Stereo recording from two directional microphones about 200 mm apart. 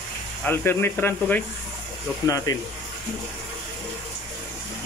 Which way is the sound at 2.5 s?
20° left (ahead or behind).